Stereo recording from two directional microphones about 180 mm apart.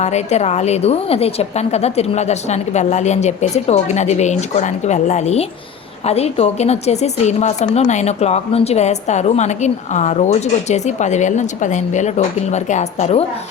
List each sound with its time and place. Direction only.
0.0 s speech: 40° left (ahead or behind)